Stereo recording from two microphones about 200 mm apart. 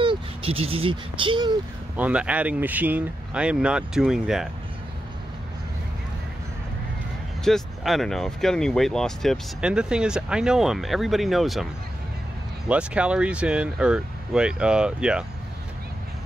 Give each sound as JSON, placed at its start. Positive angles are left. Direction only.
{"t": 0.0, "sound": "speech", "side_deg": -25}
{"t": 2.0, "sound": "speech", "side_deg": -5}
{"t": 7.4, "sound": "speech", "side_deg": 0}
{"t": 12.6, "sound": "speech", "side_deg": -5}